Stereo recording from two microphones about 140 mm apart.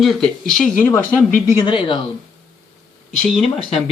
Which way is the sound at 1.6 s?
35° left (ahead or behind).